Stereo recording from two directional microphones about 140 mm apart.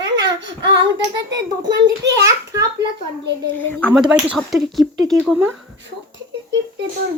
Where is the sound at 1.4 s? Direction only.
30° right (ahead or behind).